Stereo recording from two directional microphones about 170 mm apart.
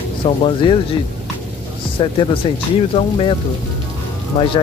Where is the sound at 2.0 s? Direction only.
30° left (ahead or behind).